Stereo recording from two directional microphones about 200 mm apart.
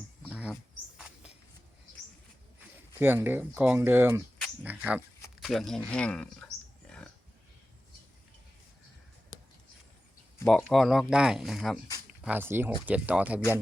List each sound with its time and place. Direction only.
0.3 s bird: 5° right (ahead or behind)
3.0 s speech: 10° right (ahead or behind)
4.4 s a sound: 5° right (ahead or behind)
5.4 s speech: centre (ahead or behind)
10.4 s speech: centre (ahead or behind)